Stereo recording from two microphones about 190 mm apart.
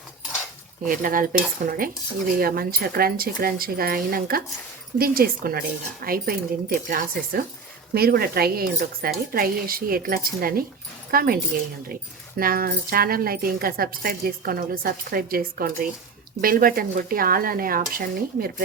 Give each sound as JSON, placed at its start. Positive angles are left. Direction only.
{"t": 0.9, "sound": "speech", "side_deg": -45}
{"t": 12.4, "sound": "speech", "side_deg": -50}